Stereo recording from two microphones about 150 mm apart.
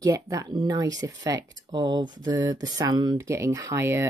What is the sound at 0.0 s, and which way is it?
Speech, 25° right (ahead or behind).